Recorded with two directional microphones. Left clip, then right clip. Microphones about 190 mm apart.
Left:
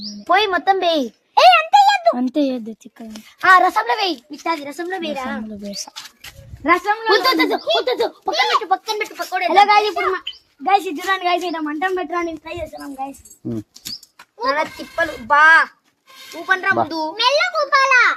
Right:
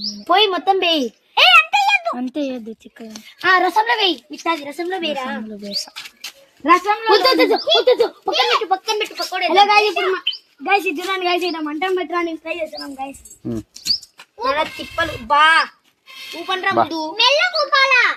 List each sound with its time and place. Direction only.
0.3 s a sound: 5° left (ahead or behind)
2.1 s speech: 65° left (ahead or behind)
3.4 s a woman's voice: 5° left (ahead or behind)
6.6 s a child's voice: 10° right (ahead or behind)
7.1 s a child's voice: 15° left (ahead or behind)
10.6 s a woman's voice: 25° left (ahead or behind)
11.6 s a woman's voice: centre (ahead or behind)
14.3 s a woman's voice: centre (ahead or behind)
15.3 s a woman's voice: centre (ahead or behind)
16.2 s a woman's voice: 10° left (ahead or behind)